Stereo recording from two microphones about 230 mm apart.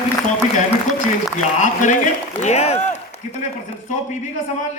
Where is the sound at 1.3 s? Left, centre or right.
Left.